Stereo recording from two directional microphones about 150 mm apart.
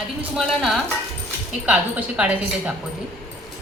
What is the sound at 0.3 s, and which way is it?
A woman's voice, centre (ahead or behind).